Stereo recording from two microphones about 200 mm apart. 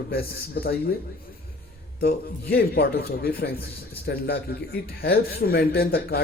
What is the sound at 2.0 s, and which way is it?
A man's voice, 50° left (ahead or behind).